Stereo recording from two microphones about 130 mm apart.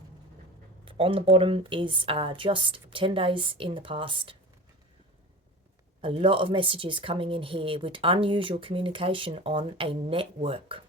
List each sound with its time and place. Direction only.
0.9 s speech: 45° right (ahead or behind)
6.0 s a woman's voice: 40° right (ahead or behind)